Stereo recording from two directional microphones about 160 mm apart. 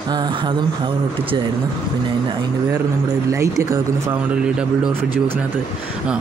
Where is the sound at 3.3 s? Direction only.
20° right (ahead or behind).